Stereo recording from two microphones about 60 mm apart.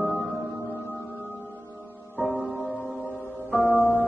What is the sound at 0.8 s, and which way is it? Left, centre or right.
Music, left.